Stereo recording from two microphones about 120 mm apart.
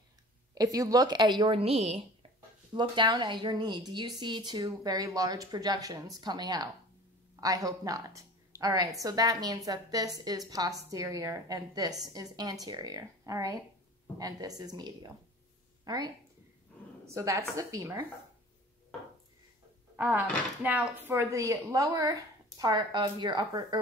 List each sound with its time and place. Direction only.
0.6 s a woman's voice: 30° right (ahead or behind)
1.6 s a woman's voice: 60° right (ahead or behind)
2.7 s a woman's voice: 40° right (ahead or behind)
17.1 s a woman's voice: 25° right (ahead or behind)
20.0 s a woman's voice: 15° right (ahead or behind); by 23.8 s 35° right (ahead or behind)